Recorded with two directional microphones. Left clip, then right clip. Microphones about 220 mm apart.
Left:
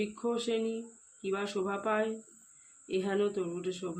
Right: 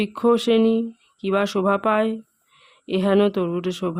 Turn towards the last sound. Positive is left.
turn(degrees=-50)  # may be behind; listen again after turning